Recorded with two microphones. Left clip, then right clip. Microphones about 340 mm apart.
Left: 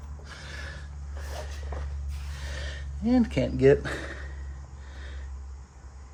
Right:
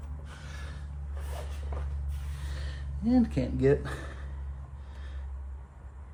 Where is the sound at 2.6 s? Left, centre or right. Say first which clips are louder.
Left 2 dB; left.